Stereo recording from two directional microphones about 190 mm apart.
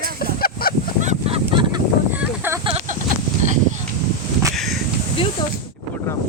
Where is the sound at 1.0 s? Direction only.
35° right (ahead or behind).